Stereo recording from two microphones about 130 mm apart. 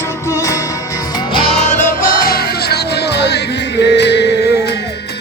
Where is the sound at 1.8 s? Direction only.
90° left.